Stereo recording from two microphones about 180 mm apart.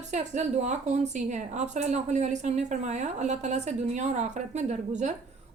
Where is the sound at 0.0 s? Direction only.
40° right (ahead or behind).